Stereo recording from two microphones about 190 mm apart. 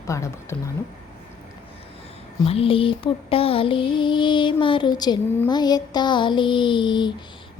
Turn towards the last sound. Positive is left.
turn(degrees=25)  # may be behind; listen again after turning